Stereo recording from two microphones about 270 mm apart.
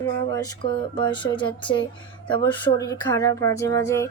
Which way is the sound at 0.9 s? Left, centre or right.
Centre.